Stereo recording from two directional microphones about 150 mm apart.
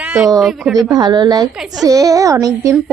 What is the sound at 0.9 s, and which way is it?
Speech, 30° right (ahead or behind).